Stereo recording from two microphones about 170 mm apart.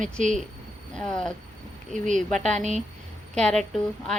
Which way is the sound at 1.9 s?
45° right (ahead or behind).